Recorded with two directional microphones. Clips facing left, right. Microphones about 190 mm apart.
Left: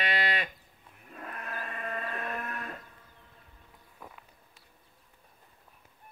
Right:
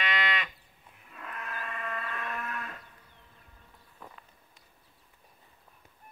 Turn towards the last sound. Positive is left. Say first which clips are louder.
# left 1 dB
turn(degrees=10)  # may be behind; listen again after turning